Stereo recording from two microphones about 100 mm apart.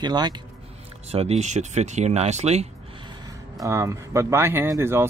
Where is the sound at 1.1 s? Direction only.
90° right.